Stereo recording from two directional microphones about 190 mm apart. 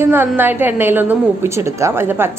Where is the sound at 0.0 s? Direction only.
10° right (ahead or behind).